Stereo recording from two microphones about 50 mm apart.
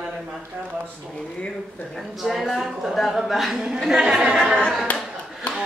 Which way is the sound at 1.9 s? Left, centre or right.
Centre.